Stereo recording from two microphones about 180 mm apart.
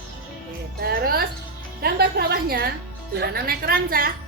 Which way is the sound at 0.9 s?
55° right (ahead or behind).